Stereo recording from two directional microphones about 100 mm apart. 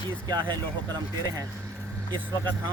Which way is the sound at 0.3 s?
45° right (ahead or behind).